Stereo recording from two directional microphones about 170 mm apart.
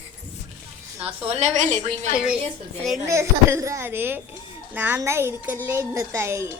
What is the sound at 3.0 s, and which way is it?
A woman's voice, 15° right (ahead or behind).